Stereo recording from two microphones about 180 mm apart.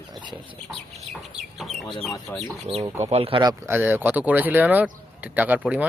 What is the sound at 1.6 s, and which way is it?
Chicken, centre (ahead or behind).